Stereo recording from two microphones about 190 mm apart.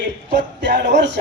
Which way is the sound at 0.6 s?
65° right (ahead or behind).